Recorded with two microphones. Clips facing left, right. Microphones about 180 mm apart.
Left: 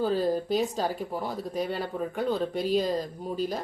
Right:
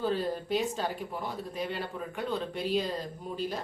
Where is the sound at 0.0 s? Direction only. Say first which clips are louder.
Left 5 dB; 40° left (ahead or behind).